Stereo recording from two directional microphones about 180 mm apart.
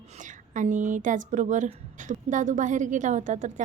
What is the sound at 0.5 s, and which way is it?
Speech, 45° right (ahead or behind).